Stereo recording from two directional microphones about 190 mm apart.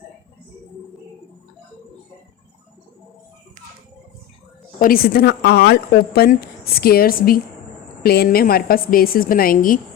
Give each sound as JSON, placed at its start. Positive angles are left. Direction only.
{"t": 4.8, "sound": "a woman's voice", "side_deg": 50}